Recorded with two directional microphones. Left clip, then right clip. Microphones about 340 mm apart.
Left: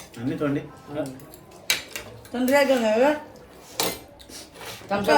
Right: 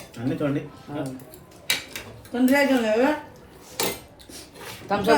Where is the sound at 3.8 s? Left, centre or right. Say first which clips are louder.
Even; centre.